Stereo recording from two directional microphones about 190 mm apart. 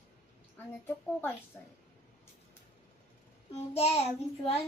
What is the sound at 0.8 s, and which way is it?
Speech, 10° left (ahead or behind).